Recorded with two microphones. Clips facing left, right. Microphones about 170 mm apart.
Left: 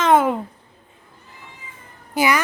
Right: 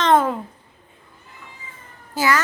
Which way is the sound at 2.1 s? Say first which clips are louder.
Left 1 dB; 15° left (ahead or behind).